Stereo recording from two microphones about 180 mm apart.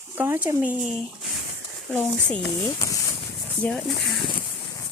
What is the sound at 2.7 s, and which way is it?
Speech, 20° left (ahead or behind).